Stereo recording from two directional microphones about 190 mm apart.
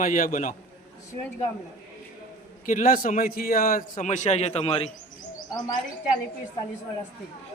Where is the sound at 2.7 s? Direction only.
45° left (ahead or behind).